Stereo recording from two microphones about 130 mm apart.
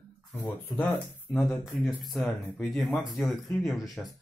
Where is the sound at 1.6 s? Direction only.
Centre (ahead or behind).